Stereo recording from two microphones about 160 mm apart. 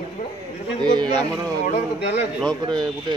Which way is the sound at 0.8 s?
25° right (ahead or behind).